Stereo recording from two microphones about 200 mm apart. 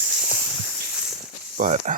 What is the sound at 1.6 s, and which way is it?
Speech, 35° right (ahead or behind).